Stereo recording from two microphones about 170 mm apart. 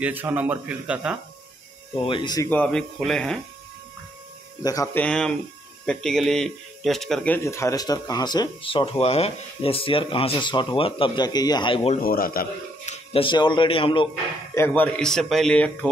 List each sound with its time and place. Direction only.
0.0 s speech: 10° right (ahead or behind)
2.0 s speech: 25° left (ahead or behind)
2.5 s speech: 5° left (ahead or behind)
4.9 s speech: 5° left (ahead or behind)
7.3 s speech: 15° left (ahead or behind); by 12.0 s 35° left (ahead or behind)
12.0 s a man's voice: 55° left (ahead or behind)
12.8 s speech: 35° left (ahead or behind)
14.5 s speech: 10° left (ahead or behind)